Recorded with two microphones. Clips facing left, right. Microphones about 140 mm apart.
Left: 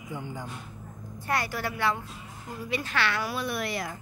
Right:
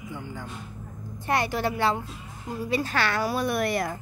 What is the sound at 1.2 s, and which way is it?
A woman's voice, 25° right (ahead or behind).